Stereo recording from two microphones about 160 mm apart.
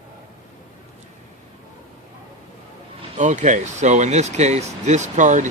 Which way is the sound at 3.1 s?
45° right (ahead or behind).